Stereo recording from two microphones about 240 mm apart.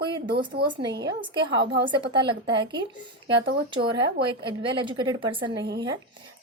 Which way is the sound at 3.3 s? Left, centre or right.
Right.